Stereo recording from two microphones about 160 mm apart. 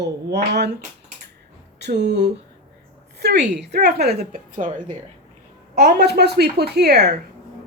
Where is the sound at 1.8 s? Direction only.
90° right.